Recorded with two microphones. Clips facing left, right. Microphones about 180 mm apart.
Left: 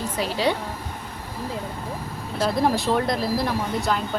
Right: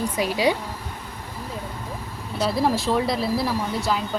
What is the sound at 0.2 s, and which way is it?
Speech, 10° right (ahead or behind).